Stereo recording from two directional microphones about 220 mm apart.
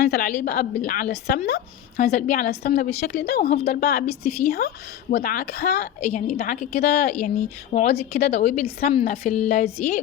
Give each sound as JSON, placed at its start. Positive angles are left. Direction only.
{"t": 0.0, "sound": "speech", "side_deg": 45}
{"t": 2.0, "sound": "a woman's voice", "side_deg": 35}
{"t": 4.0, "sound": "a woman's voice", "side_deg": 30}
{"t": 4.4, "sound": "speech", "side_deg": 45}
{"t": 6.3, "sound": "a woman's voice", "side_deg": 35}